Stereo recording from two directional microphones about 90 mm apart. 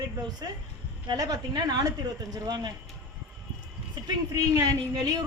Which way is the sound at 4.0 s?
60° right (ahead or behind).